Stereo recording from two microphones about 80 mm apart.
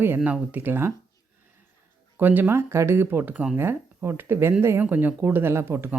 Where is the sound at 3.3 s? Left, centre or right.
Centre.